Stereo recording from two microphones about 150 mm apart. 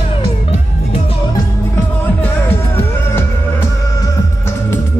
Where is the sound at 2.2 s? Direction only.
15° left (ahead or behind).